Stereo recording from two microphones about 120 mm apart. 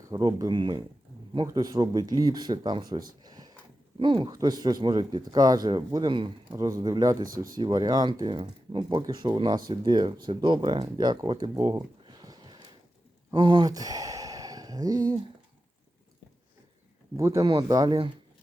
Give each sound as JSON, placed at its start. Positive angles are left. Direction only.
{"t": 0.1, "sound": "speech", "side_deg": -35}
{"t": 11.5, "sound": "a sound", "side_deg": -30}
{"t": 13.3, "sound": "speech", "side_deg": -40}
{"t": 17.2, "sound": "speech", "side_deg": -25}